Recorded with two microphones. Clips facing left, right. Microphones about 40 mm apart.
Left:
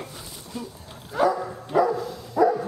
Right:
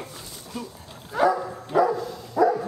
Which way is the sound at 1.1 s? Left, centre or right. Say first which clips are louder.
Right 1 dB; centre.